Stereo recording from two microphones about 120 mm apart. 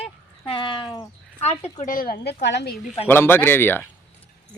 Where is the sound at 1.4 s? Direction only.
60° left (ahead or behind).